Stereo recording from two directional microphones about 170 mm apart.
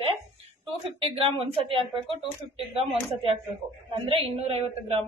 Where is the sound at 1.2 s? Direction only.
35° right (ahead or behind).